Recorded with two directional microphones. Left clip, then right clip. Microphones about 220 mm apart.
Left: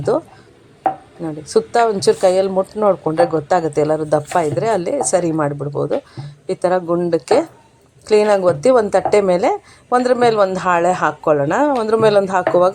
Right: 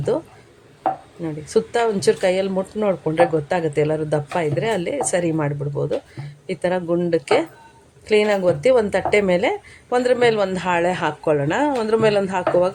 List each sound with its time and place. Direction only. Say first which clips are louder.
1.2 s a woman's voice: left 4 dB; 15° left (ahead or behind)